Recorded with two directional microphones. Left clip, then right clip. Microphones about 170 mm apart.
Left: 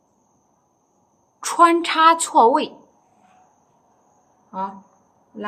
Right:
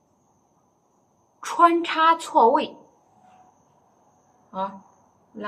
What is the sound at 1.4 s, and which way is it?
A woman's voice, 60° left (ahead or behind).